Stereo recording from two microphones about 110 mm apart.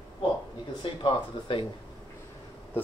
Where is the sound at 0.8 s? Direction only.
50° left (ahead or behind).